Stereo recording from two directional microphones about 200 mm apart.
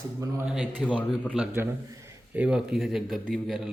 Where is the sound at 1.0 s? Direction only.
5° left (ahead or behind).